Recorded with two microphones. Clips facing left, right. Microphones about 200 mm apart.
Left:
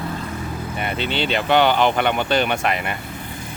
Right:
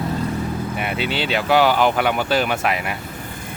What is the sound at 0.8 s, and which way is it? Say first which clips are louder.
Speech: left 2 dB; 5° right (ahead or behind).